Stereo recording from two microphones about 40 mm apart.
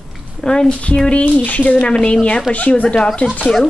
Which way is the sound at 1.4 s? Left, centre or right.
Left.